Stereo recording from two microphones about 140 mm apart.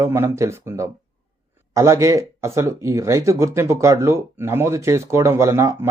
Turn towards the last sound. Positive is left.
turn(degrees=-20)  # may be behind; listen again after turning